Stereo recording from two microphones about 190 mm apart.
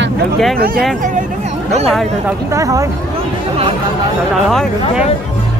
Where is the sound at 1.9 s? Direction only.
Centre (ahead or behind).